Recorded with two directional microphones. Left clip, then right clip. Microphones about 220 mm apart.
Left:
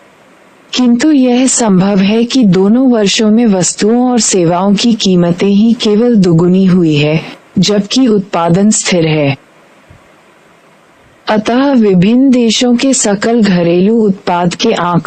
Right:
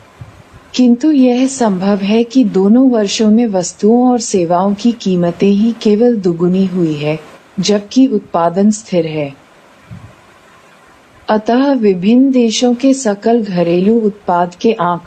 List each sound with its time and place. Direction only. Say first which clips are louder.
0.7 s a woman's voice: left 2 dB; 45° left (ahead or behind)
11.3 s a woman's voice: left 2 dB; 45° left (ahead or behind)